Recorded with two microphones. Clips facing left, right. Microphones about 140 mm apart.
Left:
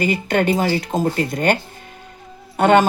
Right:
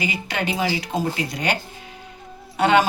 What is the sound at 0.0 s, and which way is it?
Speech, 50° left (ahead or behind).